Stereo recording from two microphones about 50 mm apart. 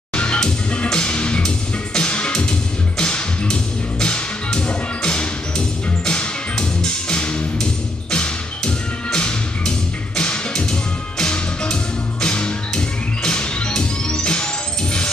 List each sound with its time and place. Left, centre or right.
0.1 s music: left